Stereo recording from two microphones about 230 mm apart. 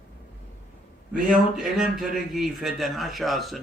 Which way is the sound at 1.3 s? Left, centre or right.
Centre.